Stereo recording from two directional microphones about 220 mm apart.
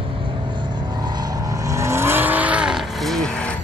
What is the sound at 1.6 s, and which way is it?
Vehicle, 15° right (ahead or behind).